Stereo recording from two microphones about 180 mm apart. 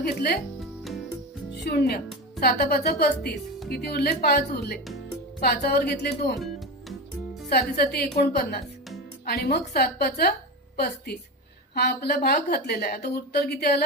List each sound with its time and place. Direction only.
0.0 s a woman's voice: 60° left (ahead or behind)
1.6 s a woman's voice: 60° left (ahead or behind)
6.4 s music: centre (ahead or behind)
7.5 s a woman's voice: 60° left (ahead or behind)